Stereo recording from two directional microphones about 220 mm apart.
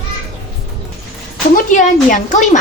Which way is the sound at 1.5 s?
35° left (ahead or behind).